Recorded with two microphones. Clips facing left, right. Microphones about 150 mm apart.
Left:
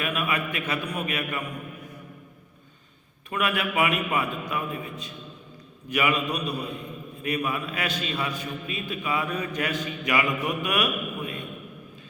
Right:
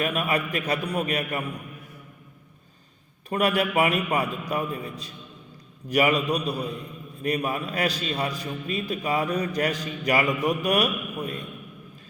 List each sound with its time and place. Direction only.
0.0 s a man's voice: 40° right (ahead or behind)
3.2 s a man's voice: 35° right (ahead or behind)